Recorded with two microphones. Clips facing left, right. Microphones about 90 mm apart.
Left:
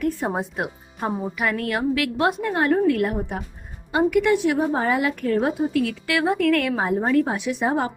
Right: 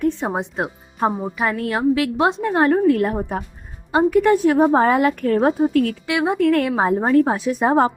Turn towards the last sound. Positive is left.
turn(degrees=-40)  # may be behind; listen again after turning